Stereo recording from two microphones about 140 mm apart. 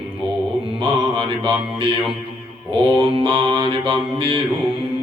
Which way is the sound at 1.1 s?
40° right (ahead or behind).